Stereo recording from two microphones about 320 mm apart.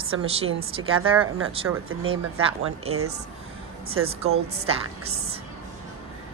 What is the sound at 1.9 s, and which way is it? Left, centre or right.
Speech, right.